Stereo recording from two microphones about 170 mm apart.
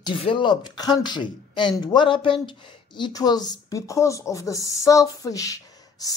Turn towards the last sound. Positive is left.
turn(degrees=20)  # may be behind; listen again after turning